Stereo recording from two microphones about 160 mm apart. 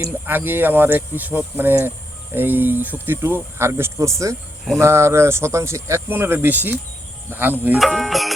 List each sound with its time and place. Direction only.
0.0 s speech: 10° right (ahead or behind)
7.9 s music: centre (ahead or behind)